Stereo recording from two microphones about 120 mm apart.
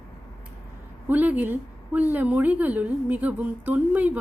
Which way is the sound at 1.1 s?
15° right (ahead or behind).